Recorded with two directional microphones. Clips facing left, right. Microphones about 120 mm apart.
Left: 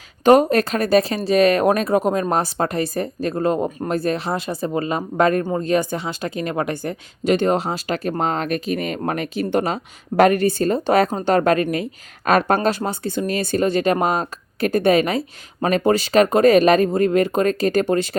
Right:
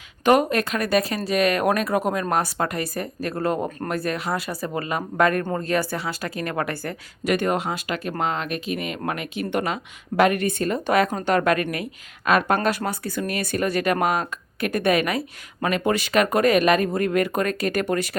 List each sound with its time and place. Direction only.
0.3 s a woman's voice: 35° left (ahead or behind)
12.6 s a woman's voice: 25° left (ahead or behind)